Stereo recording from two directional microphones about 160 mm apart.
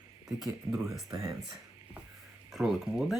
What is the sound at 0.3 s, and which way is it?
Speech, centre (ahead or behind).